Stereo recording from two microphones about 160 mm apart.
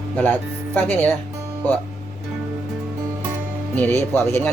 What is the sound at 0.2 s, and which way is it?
Speech, 10° left (ahead or behind).